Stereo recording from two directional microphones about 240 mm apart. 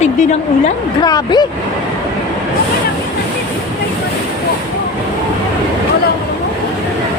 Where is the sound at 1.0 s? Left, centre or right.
Centre.